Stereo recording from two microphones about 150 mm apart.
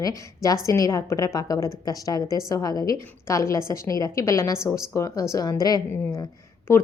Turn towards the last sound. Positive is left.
turn(degrees=20)  # may be behind; listen again after turning